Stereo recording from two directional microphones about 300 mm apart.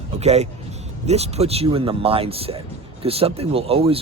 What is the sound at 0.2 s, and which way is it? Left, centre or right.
A man's voice, right.